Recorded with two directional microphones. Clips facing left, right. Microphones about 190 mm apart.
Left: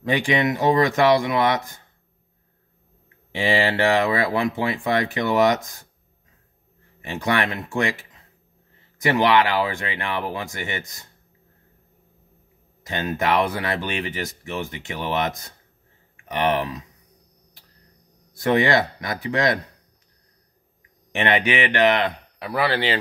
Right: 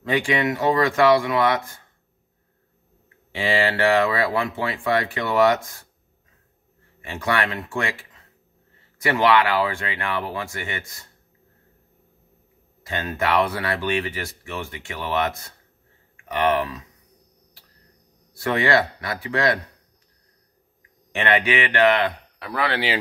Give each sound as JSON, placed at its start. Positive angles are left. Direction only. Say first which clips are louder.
{"t": 0.1, "sound": "speech", "louder": "left 1 dB", "side_deg": 20}
{"t": 3.3, "sound": "speech", "louder": "left 1 dB", "side_deg": 20}
{"t": 7.0, "sound": "speech", "louder": "left 1 dB", "side_deg": 20}
{"t": 12.8, "sound": "speech", "louder": "left 1 dB", "side_deg": 20}
{"t": 18.4, "sound": "speech", "louder": "left 2 dB", "side_deg": 20}
{"t": 21.1, "sound": "speech", "louder": "even", "side_deg": 20}
{"t": 22.7, "sound": "speech", "louder": "left 1 dB", "side_deg": -5}